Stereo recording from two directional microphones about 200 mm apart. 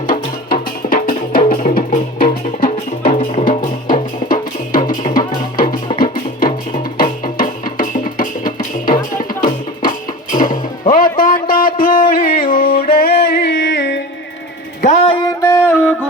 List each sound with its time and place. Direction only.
0.5 s music: 45° left (ahead or behind)
3.2 s music: 30° left (ahead or behind); by 14.0 s 60° left (ahead or behind)
14.8 s a sound: 35° left (ahead or behind)
15.4 s music: 15° left (ahead or behind)